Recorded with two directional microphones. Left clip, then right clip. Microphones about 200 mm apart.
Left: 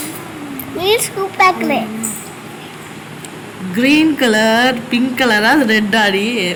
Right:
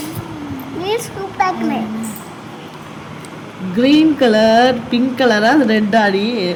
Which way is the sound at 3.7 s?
15° right (ahead or behind).